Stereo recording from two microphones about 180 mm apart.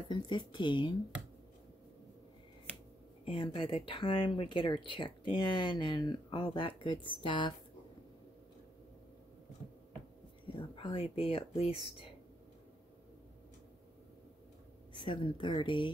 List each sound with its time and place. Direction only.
0.1 s speech: 25° left (ahead or behind)
3.3 s speech: 30° left (ahead or behind)
10.8 s speech: 30° left (ahead or behind)
15.0 s speech: 25° left (ahead or behind)